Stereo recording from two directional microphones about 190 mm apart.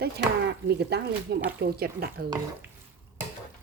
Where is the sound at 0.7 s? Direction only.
60° right (ahead or behind).